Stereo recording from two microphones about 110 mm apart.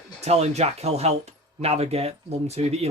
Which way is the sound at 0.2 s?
80° right.